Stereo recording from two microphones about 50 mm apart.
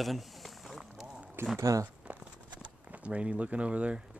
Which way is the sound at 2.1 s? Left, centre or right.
Right.